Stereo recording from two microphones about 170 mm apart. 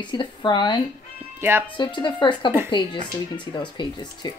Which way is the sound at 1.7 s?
25° left (ahead or behind).